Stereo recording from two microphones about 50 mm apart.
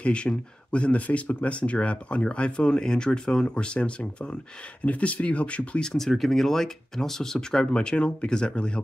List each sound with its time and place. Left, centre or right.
0.0 s speech: left
5.8 s speech: centre